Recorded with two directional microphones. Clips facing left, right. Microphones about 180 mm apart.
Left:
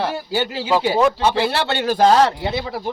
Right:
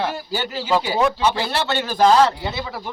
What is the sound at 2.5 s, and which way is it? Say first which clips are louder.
Speech: left 4 dB; 30° left (ahead or behind).